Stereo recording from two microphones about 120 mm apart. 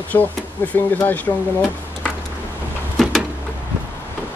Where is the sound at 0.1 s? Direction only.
25° left (ahead or behind).